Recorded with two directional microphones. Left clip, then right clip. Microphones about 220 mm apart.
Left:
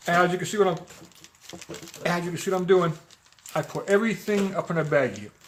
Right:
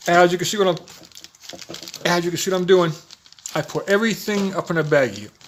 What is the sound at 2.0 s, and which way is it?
Speech, 40° right (ahead or behind).